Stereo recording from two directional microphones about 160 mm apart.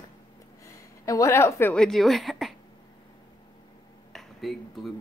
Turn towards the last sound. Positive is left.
turn(degrees=0)  # may be behind; listen again after turning